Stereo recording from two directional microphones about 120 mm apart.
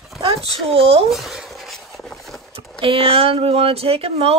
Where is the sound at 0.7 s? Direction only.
50° right (ahead or behind).